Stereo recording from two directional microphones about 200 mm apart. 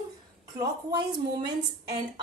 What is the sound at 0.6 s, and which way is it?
Speech, 20° right (ahead or behind).